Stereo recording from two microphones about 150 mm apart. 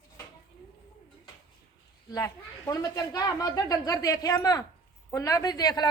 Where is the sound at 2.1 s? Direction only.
20° left (ahead or behind).